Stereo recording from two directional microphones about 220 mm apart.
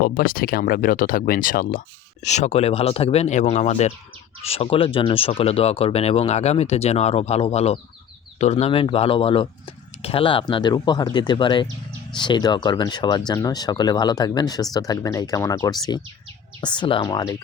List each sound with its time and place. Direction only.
0.0 s speech: 40° left (ahead or behind); by 17.3 s 20° left (ahead or behind)